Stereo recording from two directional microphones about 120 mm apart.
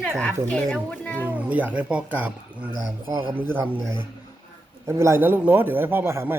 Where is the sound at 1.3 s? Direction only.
10° right (ahead or behind).